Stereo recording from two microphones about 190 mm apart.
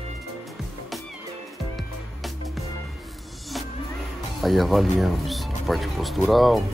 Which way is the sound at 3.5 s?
Centre (ahead or behind).